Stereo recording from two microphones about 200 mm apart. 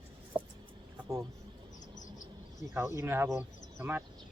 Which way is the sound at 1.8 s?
40° left (ahead or behind).